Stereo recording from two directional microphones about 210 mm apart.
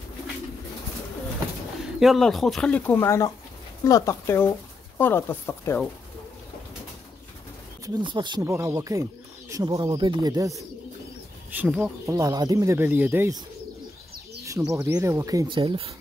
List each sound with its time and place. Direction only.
2.0 s speech: centre (ahead or behind)
7.8 s speech: 20° right (ahead or behind)
11.5 s speech: 5° right (ahead or behind)
12.1 s speech: 15° right (ahead or behind)
14.4 s a sound: 15° right (ahead or behind)
14.8 s speech: 15° right (ahead or behind)